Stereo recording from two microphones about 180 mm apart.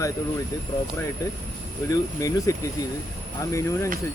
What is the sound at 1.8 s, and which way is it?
Speech, 20° left (ahead or behind).